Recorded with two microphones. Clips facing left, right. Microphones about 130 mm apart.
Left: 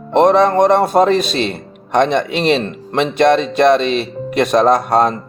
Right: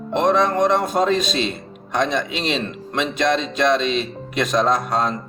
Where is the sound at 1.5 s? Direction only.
65° left (ahead or behind).